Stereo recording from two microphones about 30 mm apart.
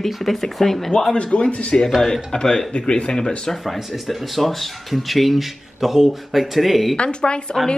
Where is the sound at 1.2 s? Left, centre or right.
Left.